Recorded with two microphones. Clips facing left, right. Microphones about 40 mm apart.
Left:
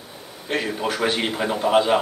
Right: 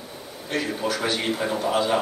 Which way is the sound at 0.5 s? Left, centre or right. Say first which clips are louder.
Left 2 dB; left.